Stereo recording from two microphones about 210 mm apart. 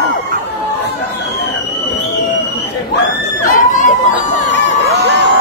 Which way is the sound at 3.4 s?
40° left (ahead or behind).